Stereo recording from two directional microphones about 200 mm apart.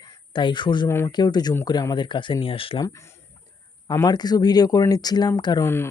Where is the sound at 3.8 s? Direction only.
20° left (ahead or behind).